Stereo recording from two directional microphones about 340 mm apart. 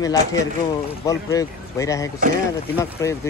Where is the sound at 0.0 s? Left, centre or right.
Centre.